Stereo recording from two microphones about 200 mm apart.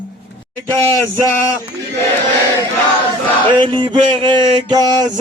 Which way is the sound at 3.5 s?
25° right (ahead or behind).